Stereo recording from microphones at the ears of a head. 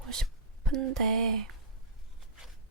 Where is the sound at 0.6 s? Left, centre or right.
Right.